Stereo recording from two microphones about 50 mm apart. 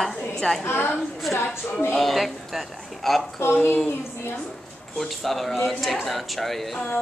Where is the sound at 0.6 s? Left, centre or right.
Left.